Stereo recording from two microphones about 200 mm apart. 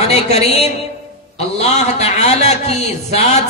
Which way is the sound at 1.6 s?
35° left (ahead or behind).